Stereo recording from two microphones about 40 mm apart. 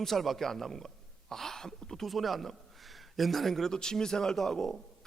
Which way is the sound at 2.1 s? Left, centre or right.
Centre.